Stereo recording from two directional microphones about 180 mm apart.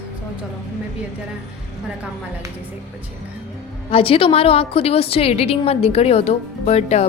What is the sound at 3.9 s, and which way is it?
A woman's voice, 30° left (ahead or behind).